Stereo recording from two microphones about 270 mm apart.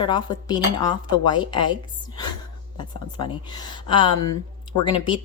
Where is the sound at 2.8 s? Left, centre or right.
Centre.